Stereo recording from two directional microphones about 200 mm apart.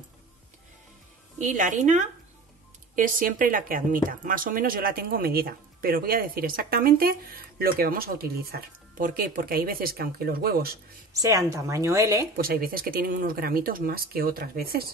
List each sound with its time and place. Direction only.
1.4 s speech: 40° right (ahead or behind)
11.1 s a woman's voice: 15° right (ahead or behind)
12.4 s speech: 45° right (ahead or behind)